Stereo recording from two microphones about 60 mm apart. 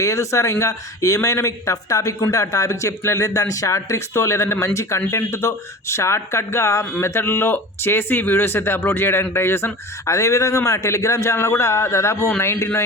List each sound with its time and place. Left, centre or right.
0.0 s speech: left